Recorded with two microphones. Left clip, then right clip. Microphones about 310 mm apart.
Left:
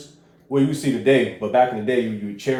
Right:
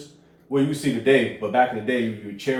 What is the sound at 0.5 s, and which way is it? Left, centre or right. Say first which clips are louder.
Speech: left 2 dB; left.